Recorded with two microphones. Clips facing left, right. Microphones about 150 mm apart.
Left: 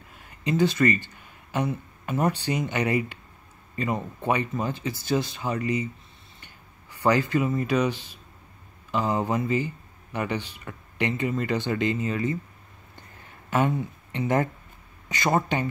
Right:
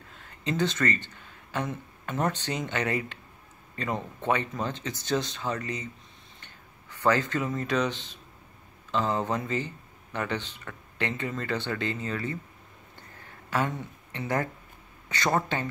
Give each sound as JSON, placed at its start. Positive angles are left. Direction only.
{"t": 0.1, "sound": "speech", "side_deg": 10}
{"t": 13.5, "sound": "speech", "side_deg": 15}